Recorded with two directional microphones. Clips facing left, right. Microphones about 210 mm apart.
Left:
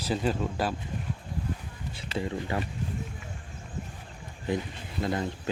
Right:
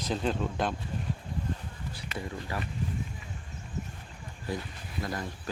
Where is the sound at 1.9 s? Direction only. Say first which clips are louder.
Left 6 dB; 25° left (ahead or behind).